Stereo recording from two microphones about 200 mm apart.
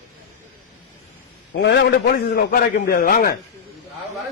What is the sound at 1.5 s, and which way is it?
A man's voice, 55° left (ahead or behind).